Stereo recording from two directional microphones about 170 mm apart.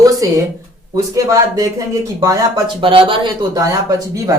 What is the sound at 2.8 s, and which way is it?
Speech, 30° right (ahead or behind).